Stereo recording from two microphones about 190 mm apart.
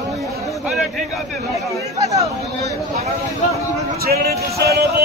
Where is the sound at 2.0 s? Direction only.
15° right (ahead or behind).